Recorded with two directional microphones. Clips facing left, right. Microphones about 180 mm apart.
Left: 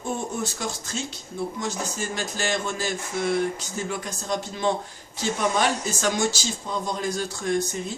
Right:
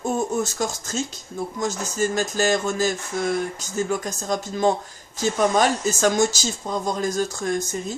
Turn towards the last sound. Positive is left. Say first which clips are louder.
# even
turn(degrees=-45)  # may be behind; listen again after turning